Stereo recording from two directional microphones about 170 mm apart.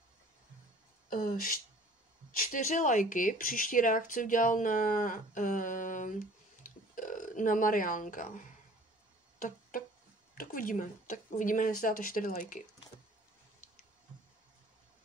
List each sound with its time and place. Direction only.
1.1 s speech: 55° left (ahead or behind)
6.6 s burping: 50° left (ahead or behind)
9.4 s music: 55° left (ahead or behind)
10.3 s speech: 55° left (ahead or behind)